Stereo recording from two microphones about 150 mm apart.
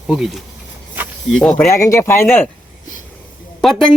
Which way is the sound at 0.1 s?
Centre (ahead or behind).